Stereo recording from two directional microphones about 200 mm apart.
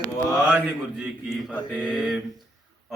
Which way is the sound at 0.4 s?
5° right (ahead or behind).